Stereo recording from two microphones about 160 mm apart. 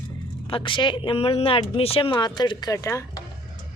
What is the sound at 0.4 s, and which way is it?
Speech, 35° left (ahead or behind).